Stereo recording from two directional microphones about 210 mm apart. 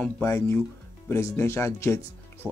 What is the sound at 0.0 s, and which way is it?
Speech, 10° left (ahead or behind).